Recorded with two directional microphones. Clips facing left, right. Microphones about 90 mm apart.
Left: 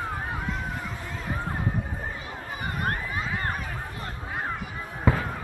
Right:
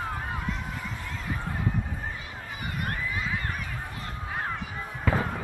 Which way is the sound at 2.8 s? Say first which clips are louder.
Left 2 dB; 40° left (ahead or behind).